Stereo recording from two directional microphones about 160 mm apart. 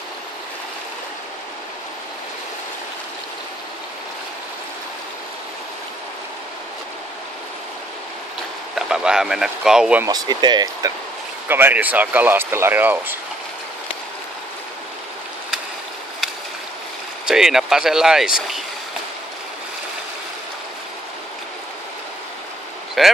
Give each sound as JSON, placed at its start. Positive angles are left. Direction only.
{"t": 8.7, "sound": "speech", "side_deg": -5}
{"t": 10.0, "sound": "speech", "side_deg": -25}
{"t": 11.4, "sound": "speech", "side_deg": -15}
{"t": 17.3, "sound": "speech", "side_deg": -5}
{"t": 23.0, "sound": "speech", "side_deg": 0}